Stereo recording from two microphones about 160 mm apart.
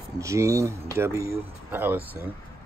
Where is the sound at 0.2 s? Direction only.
20° right (ahead or behind).